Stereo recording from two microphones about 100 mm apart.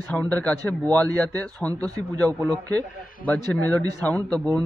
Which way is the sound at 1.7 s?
40° right (ahead or behind).